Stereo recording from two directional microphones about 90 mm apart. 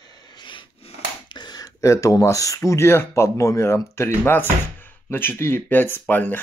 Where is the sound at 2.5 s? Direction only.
30° left (ahead or behind).